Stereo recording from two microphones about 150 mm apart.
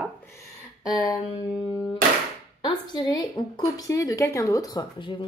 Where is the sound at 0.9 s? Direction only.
25° left (ahead or behind).